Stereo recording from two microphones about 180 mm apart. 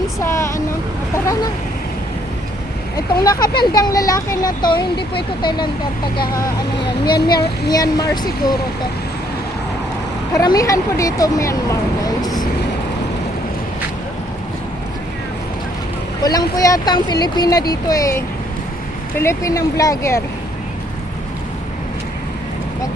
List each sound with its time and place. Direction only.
0.2 s vehicle: 15° left (ahead or behind)
1.1 s a sound: 15° left (ahead or behind)
2.9 s speech: 20° left (ahead or behind)
7.7 s speech: 20° left (ahead or behind)
10.3 s speech: 20° left (ahead or behind)
16.2 s speech: 20° left (ahead or behind)